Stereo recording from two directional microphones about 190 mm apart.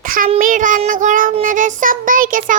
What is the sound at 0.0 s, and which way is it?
Child singing, 45° right (ahead or behind).